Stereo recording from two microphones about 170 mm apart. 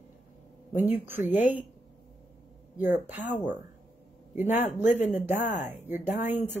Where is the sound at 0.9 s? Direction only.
10° right (ahead or behind).